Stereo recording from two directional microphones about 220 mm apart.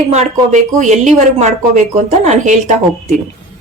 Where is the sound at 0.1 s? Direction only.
30° right (ahead or behind).